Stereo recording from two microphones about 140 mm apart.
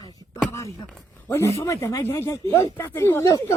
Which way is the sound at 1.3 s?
20° left (ahead or behind).